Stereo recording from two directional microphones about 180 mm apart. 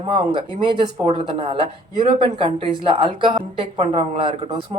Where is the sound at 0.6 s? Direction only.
30° right (ahead or behind).